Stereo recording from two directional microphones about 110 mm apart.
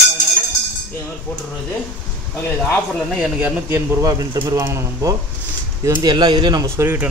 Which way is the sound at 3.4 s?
20° right (ahead or behind).